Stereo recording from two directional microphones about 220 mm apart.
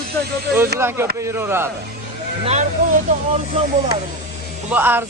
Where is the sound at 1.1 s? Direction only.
10° right (ahead or behind).